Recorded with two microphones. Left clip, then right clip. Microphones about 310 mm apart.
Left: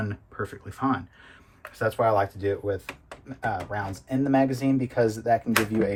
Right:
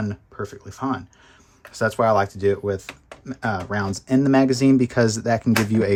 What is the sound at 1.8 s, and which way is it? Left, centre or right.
Speech, right.